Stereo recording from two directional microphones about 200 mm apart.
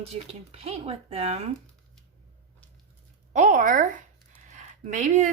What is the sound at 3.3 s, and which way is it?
Speech, 40° right (ahead or behind).